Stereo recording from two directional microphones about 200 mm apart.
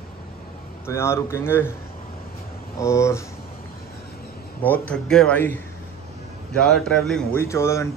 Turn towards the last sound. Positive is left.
turn(degrees=15)  # may be behind; listen again after turning